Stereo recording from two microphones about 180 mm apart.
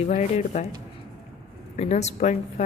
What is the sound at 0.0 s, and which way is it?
Speech, 40° left (ahead or behind).